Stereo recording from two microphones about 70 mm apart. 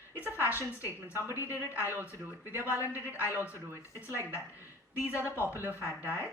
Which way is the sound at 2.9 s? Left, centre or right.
Left.